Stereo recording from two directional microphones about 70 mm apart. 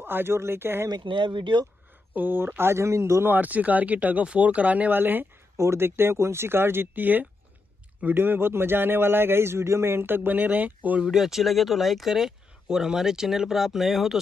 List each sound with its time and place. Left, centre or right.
0.0 s a man's voice: right
2.1 s a man's voice: right
3.3 s a man's voice: right
11.0 s speech: centre